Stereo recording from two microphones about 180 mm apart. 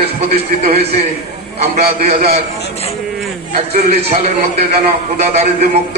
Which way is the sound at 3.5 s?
40° right (ahead or behind).